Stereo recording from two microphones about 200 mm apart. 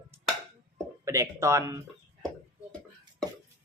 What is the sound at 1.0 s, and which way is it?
Speech, 15° right (ahead or behind).